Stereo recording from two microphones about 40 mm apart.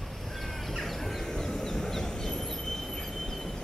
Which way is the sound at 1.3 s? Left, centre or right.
Centre.